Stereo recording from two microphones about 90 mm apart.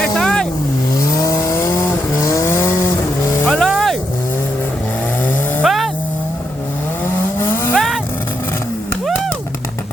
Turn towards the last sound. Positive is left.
turn(degrees=5)  # may be behind; listen again after turning